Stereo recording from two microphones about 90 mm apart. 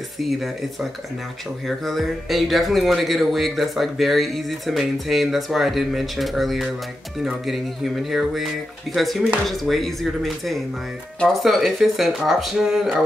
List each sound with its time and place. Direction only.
1.7 s speech: centre (ahead or behind)